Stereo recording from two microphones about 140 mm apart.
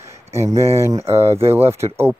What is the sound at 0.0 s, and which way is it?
Speech, 20° right (ahead or behind).